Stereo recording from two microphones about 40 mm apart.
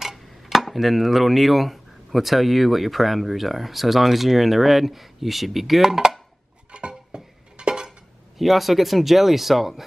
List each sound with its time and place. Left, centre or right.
0.0 s speech: centre
6.7 s a sound: right
8.4 s speech: centre